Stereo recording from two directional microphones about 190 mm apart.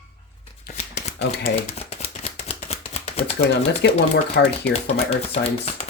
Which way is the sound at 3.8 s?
65° left (ahead or behind).